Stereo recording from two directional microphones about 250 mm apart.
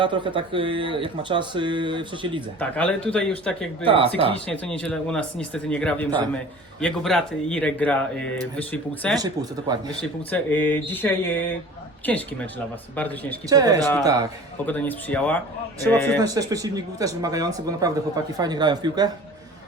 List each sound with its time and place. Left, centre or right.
0.0 s speech: centre
2.6 s speech: centre
3.8 s speech: right
4.4 s speech: centre
9.1 s speech: centre
10.0 s speech: centre
13.5 s speech: centre
14.7 s speech: centre
16.2 s speech: centre